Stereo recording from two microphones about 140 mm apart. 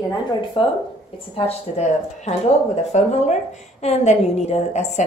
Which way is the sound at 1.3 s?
50° left (ahead or behind).